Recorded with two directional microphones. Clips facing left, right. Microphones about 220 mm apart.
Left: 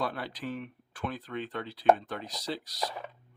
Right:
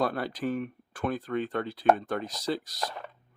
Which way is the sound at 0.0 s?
45° right (ahead or behind).